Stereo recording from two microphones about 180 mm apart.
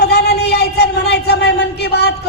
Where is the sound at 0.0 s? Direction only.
65° left (ahead or behind).